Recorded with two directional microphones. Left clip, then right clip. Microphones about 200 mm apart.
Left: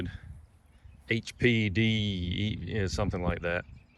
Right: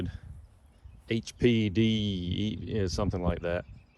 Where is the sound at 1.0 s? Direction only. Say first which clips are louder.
Even; 15° right (ahead or behind).